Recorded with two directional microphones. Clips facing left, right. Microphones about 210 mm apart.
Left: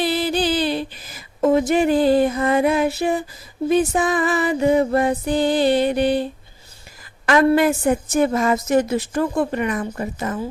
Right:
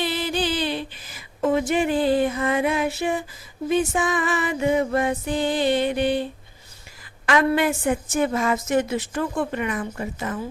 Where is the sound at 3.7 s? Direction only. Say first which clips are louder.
Left 4 dB; 35° left (ahead or behind).